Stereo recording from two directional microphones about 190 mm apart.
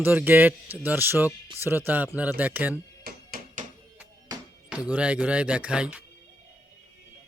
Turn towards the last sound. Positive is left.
turn(degrees=-5)  # may be behind; listen again after turning